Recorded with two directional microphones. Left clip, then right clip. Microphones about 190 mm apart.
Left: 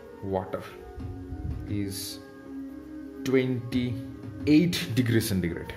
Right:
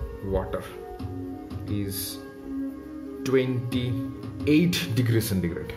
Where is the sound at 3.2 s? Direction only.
15° left (ahead or behind).